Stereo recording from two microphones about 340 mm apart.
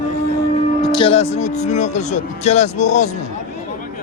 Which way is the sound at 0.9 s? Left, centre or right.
Centre.